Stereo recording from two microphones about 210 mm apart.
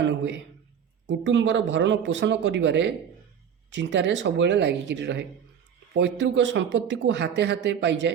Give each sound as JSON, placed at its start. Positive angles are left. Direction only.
{"t": 0.0, "sound": "speech", "side_deg": -60}